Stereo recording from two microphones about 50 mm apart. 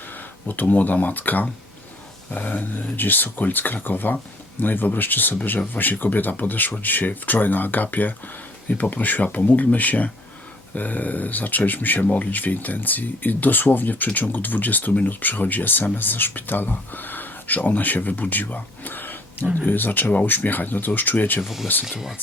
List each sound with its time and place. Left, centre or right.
0.1 s speech: left
21.4 s speech: centre